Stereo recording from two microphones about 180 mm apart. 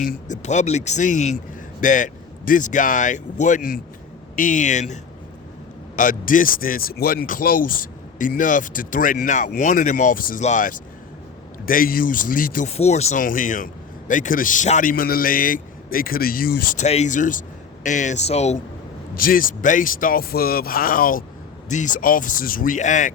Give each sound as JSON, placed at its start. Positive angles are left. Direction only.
{"t": 0.0, "sound": "speech", "side_deg": 45}
{"t": 6.0, "sound": "speech", "side_deg": 50}
{"t": 12.6, "sound": "speech", "side_deg": 35}
{"t": 16.8, "sound": "speech", "side_deg": 40}
{"t": 19.1, "sound": "speech", "side_deg": 50}